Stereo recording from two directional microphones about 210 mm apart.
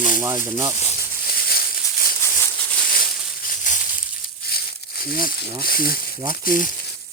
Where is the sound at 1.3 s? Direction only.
45° left (ahead or behind).